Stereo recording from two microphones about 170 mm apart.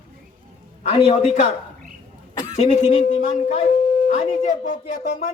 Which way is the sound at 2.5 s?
40° left (ahead or behind).